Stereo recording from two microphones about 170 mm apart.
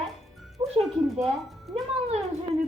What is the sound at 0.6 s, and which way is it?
Speech, 25° right (ahead or behind).